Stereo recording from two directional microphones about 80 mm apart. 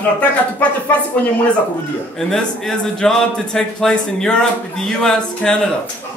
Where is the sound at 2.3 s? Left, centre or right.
Centre.